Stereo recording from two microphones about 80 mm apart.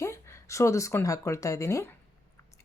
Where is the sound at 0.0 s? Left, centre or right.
Left.